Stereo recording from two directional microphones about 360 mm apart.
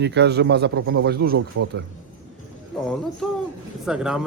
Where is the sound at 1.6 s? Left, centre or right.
Right.